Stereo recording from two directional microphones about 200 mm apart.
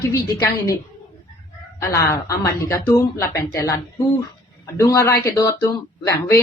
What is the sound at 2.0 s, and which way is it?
Speech, 15° left (ahead or behind).